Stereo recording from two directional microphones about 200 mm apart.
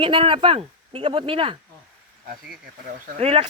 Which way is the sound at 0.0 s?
25° right (ahead or behind).